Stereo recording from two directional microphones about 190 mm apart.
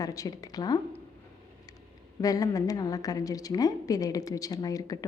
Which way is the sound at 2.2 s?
20° left (ahead or behind).